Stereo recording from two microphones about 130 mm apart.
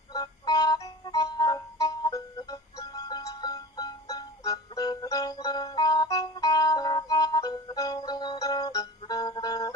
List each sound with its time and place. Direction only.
0.1 s music: 30° left (ahead or behind)